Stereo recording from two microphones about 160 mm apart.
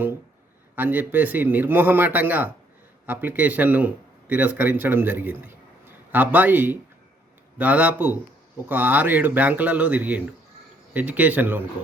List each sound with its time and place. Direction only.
0.8 s speech: 10° right (ahead or behind)